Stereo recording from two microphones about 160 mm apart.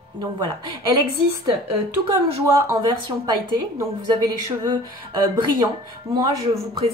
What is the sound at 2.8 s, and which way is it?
Speech, 30° right (ahead or behind).